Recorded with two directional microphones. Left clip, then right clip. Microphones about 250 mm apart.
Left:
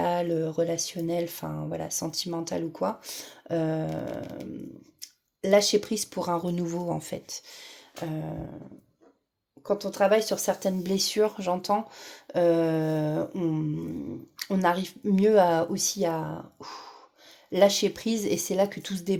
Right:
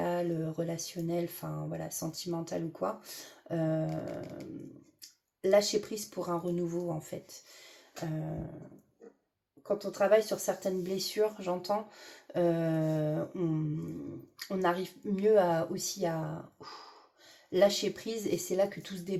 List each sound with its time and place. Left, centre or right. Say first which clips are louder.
0.0 s speech: left 7 dB; left
4.9 s speech: left 12 dB; left
9.6 s speech: left 4 dB; left
16.6 s dog: left 6 dB; left
17.5 s speech: left 5 dB; left